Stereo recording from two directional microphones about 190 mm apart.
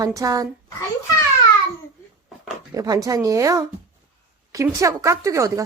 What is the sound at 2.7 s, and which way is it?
Speech, 20° right (ahead or behind).